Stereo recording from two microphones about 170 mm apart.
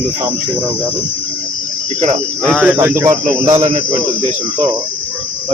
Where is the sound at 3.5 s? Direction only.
40° right (ahead or behind).